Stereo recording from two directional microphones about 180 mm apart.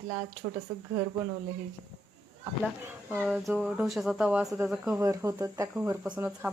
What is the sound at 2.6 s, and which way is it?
Speech, 5° right (ahead or behind).